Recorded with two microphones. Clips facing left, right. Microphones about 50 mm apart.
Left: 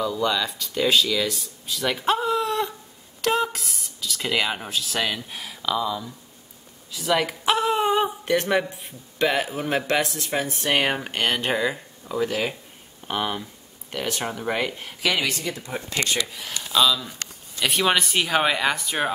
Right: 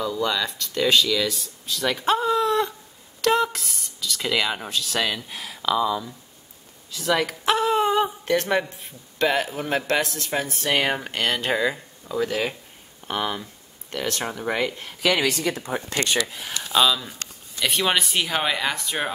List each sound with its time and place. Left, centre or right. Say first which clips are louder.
0.0 s speech: left 1 dB; centre
6.9 s a sound: even; centre
9.3 s speech: even; centre
14.2 s speech: right 1 dB; centre
15.5 s speech: right 4 dB; right
16.7 s speech: even; centre
17.6 s speech: left 1 dB; centre